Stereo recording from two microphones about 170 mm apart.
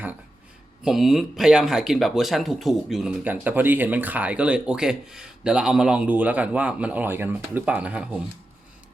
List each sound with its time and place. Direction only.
0.9 s speech: centre (ahead or behind)